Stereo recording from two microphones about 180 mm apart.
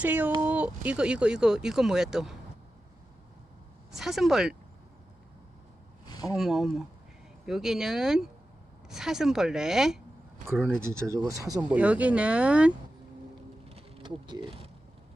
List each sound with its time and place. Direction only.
0.0 s speech: 10° right (ahead or behind)
3.9 s speech: centre (ahead or behind)
6.2 s speech: centre (ahead or behind)
10.8 s speech: 15° right (ahead or behind)
11.7 s speech: 10° right (ahead or behind)
13.7 s insect: 35° right (ahead or behind)